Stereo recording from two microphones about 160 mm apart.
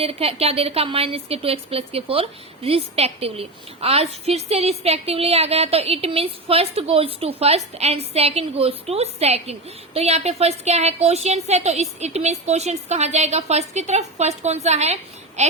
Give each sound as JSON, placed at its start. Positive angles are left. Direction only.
{"t": 0.0, "sound": "speech", "side_deg": -35}